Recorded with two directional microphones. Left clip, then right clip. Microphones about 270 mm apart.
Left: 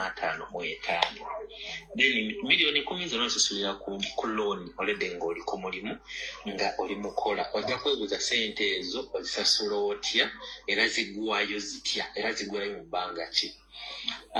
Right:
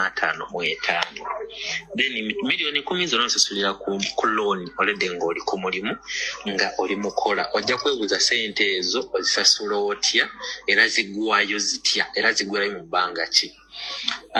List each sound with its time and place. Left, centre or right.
0.0 s speech: right